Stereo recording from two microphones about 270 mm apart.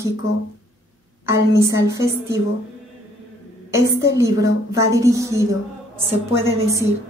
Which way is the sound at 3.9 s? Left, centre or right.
Centre.